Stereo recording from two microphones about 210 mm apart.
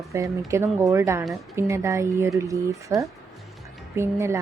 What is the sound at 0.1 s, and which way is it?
A woman's voice, 15° right (ahead or behind).